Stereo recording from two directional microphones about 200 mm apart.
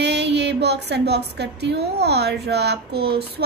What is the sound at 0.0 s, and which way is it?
A woman's voice, 60° right (ahead or behind).